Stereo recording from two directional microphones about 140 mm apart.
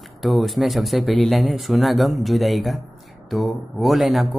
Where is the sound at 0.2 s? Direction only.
Centre (ahead or behind).